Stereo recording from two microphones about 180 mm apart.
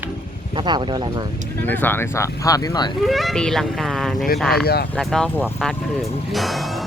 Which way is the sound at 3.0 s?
Centre (ahead or behind).